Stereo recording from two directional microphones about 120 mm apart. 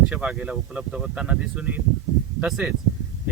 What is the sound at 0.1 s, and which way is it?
A man's voice, 5° right (ahead or behind).